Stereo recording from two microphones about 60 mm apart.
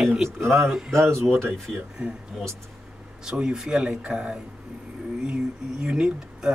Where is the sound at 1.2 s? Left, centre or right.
Right.